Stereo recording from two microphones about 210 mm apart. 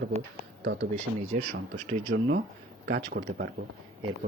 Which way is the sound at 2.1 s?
50° right (ahead or behind).